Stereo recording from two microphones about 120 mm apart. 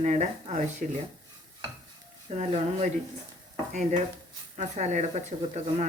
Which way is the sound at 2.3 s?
60° right (ahead or behind).